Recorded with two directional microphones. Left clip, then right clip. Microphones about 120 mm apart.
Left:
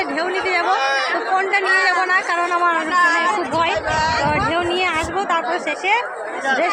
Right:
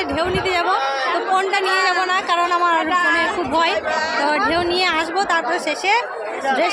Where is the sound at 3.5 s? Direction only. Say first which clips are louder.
Right 1 dB; 40° right (ahead or behind).